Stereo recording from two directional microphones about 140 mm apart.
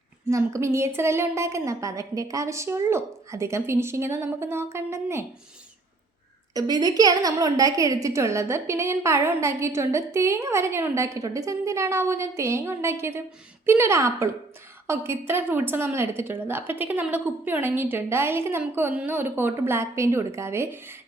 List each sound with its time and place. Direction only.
0.3 s a woman's voice: 20° right (ahead or behind)
6.5 s a woman's voice: 25° right (ahead or behind)